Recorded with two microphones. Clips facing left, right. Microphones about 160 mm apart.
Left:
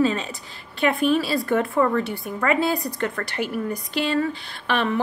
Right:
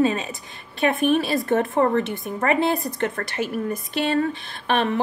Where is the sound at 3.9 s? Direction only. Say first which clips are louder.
Right 1 dB; 60° right (ahead or behind).